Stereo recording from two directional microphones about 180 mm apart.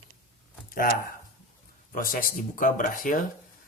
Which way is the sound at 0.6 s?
50° left (ahead or behind).